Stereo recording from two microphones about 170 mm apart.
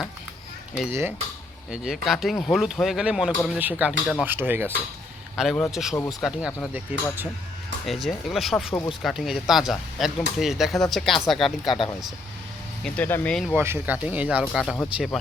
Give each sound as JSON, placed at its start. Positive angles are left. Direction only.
{"t": 1.7, "sound": "speech", "side_deg": -5}
{"t": 5.4, "sound": "speech", "side_deg": 0}
{"t": 12.8, "sound": "speech", "side_deg": 10}
{"t": 13.5, "sound": "speech", "side_deg": -10}